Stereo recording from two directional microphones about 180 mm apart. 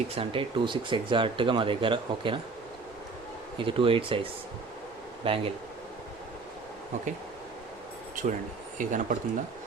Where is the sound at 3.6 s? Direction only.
30° right (ahead or behind).